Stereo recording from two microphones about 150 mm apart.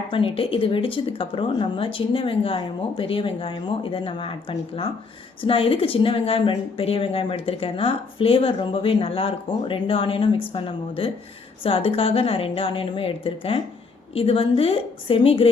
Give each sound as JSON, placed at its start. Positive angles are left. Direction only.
{"t": 0.1, "sound": "a woman's voice", "side_deg": 35}